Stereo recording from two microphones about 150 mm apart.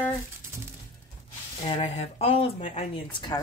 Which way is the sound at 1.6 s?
40° left (ahead or behind).